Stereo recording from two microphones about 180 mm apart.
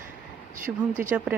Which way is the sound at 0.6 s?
45° right (ahead or behind).